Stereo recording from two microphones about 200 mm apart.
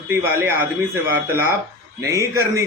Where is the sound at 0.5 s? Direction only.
10° right (ahead or behind).